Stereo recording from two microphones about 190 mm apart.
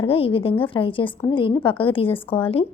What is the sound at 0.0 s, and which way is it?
A woman's voice, 30° left (ahead or behind).